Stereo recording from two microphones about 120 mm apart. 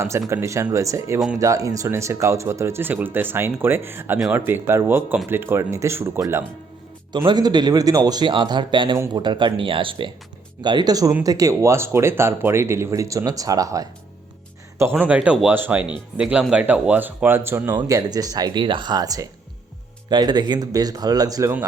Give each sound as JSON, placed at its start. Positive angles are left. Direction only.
{"t": 0.0, "sound": "speech", "side_deg": -25}
{"t": 7.3, "sound": "speech", "side_deg": -35}
{"t": 14.8, "sound": "speech", "side_deg": -15}
{"t": 17.7, "sound": "speech", "side_deg": -30}